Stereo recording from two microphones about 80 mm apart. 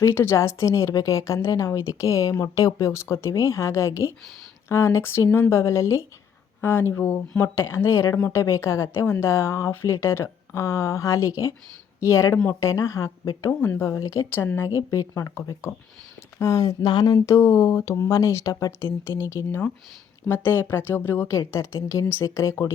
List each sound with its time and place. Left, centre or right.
0.0 s speech: left
14.8 s speech: left
17.2 s speech: left
21.2 s speech: left